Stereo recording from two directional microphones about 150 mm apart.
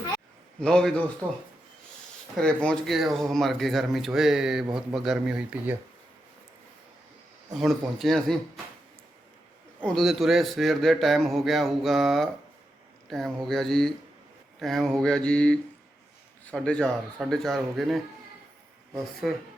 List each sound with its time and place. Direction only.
0.6 s a man's voice: 5° left (ahead or behind)
2.3 s a man's voice: 5° left (ahead or behind)
7.6 s a man's voice: centre (ahead or behind)
9.8 s a man's voice: centre (ahead or behind)
19.2 s a man's voice: 5° right (ahead or behind)